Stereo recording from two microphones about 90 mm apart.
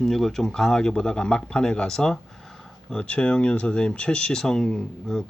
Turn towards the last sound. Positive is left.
turn(degrees=5)  # may be behind; listen again after turning